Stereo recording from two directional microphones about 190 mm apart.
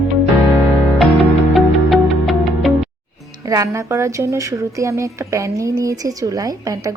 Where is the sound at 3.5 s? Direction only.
15° right (ahead or behind).